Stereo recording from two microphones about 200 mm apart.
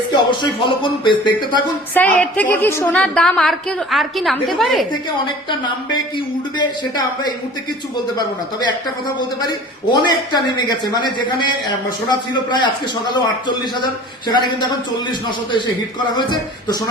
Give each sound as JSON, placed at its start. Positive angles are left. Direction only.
{"t": 0.1, "sound": "a man's voice", "side_deg": 25}
{"t": 2.0, "sound": "a woman's voice", "side_deg": 10}
{"t": 5.2, "sound": "a man's voice", "side_deg": 25}
{"t": 8.6, "sound": "a man's voice", "side_deg": 20}
{"t": 14.3, "sound": "a man's voice", "side_deg": 20}
{"t": 16.1, "sound": "a man's voice", "side_deg": 20}